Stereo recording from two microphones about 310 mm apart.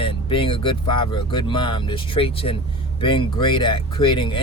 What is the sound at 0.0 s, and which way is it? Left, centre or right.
Speech, centre.